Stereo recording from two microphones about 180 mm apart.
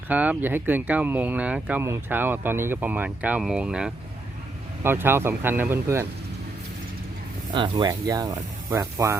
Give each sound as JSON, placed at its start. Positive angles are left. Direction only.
{"t": 0.1, "sound": "speech", "side_deg": -10}
{"t": 7.5, "sound": "speech", "side_deg": -25}